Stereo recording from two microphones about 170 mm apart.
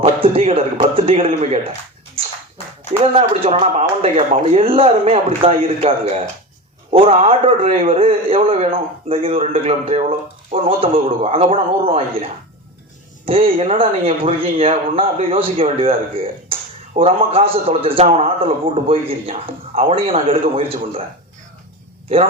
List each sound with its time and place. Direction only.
0.0 s a man's voice: 35° right (ahead or behind)
2.2 s dog: 35° right (ahead or behind)
3.0 s a man's voice: 35° right (ahead or behind)
13.2 s a man's voice: 30° right (ahead or behind)